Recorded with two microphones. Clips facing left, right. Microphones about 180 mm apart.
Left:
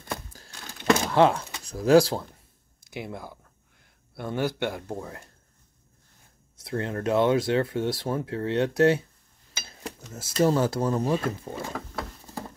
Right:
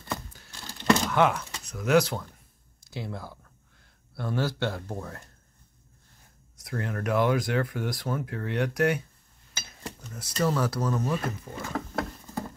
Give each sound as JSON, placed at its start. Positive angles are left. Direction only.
{"t": 0.7, "sound": "a sound", "side_deg": 5}
{"t": 1.1, "sound": "speech", "side_deg": 30}
{"t": 2.8, "sound": "speech", "side_deg": 20}
{"t": 6.6, "sound": "speech", "side_deg": 25}
{"t": 9.7, "sound": "dishes", "side_deg": 25}
{"t": 10.4, "sound": "speech", "side_deg": 25}